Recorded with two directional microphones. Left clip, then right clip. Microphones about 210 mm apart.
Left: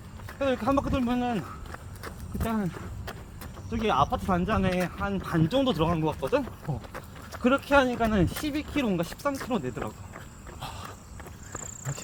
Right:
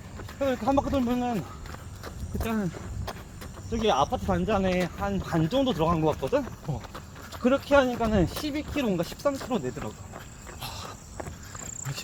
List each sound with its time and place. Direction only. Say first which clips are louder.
0.3 s speech: right 1 dB; 50° left (ahead or behind)
2.4 s speech: even; 35° left (ahead or behind)
3.7 s speech: right 1 dB; 40° left (ahead or behind)
6.7 s speech: even; 15° right (ahead or behind)
7.4 s speech: right 1 dB; 50° left (ahead or behind)
10.6 s cricket: right 1 dB; 25° right (ahead or behind)